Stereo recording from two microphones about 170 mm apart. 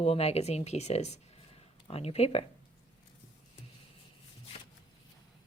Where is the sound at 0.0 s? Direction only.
35° left (ahead or behind).